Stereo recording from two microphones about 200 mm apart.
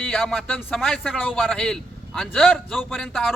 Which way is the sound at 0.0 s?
5° left (ahead or behind).